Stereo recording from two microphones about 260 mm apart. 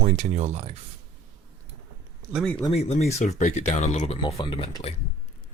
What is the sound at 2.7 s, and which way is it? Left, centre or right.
Speech, left.